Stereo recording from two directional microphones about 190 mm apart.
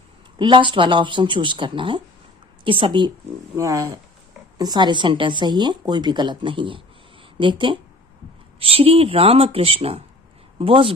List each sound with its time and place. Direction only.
0.3 s speech: 25° right (ahead or behind)